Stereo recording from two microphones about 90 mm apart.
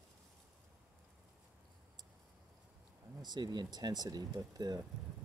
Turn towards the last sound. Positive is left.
turn(degrees=-45)  # may be behind; listen again after turning